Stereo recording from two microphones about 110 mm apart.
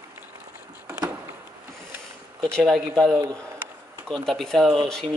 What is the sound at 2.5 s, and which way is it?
Speech, centre (ahead or behind).